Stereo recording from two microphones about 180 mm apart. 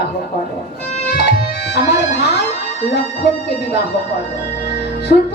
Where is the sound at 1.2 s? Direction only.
70° left (ahead or behind).